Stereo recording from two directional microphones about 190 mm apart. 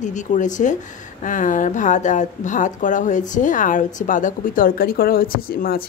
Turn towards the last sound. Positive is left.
turn(degrees=50)  # may be behind; listen again after turning